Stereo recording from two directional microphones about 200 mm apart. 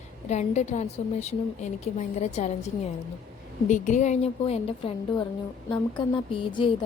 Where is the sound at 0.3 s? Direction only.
35° left (ahead or behind).